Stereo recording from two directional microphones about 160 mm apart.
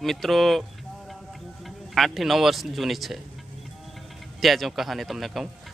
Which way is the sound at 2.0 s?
Centre (ahead or behind).